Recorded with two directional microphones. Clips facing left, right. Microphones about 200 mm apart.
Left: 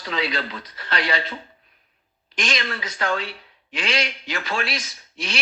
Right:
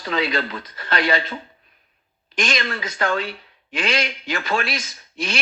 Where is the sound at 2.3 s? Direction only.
50° right (ahead or behind).